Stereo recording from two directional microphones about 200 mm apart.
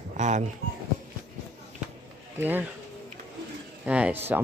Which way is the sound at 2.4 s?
10° right (ahead or behind).